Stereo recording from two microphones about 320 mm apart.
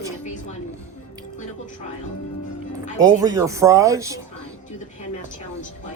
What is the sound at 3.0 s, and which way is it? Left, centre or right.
Speech, centre.